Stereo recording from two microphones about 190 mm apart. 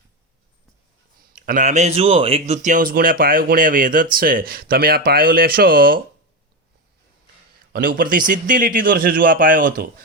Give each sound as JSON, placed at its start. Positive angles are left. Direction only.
{"t": 1.3, "sound": "speech", "side_deg": -45}
{"t": 7.7, "sound": "speech", "side_deg": -50}